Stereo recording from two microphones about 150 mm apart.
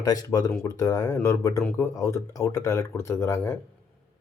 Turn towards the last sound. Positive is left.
turn(degrees=20)  # may be behind; listen again after turning